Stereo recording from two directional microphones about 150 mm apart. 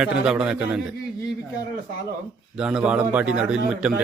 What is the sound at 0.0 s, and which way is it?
Speech, 5° right (ahead or behind).